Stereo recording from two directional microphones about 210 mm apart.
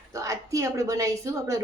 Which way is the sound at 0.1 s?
15° right (ahead or behind).